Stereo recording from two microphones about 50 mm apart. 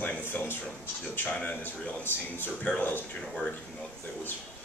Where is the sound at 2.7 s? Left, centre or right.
Left.